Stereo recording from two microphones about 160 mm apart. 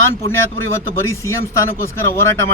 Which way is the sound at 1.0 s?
15° left (ahead or behind).